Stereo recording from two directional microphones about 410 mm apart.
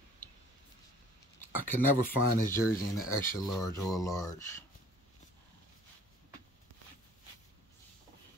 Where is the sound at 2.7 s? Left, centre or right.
Left.